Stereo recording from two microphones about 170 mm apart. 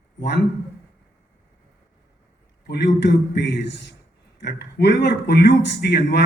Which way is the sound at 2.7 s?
85° left.